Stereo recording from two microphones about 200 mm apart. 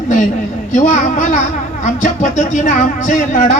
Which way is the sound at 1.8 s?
35° left (ahead or behind).